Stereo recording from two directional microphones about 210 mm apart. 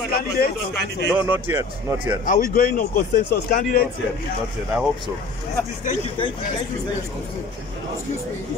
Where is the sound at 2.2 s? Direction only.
40° left (ahead or behind).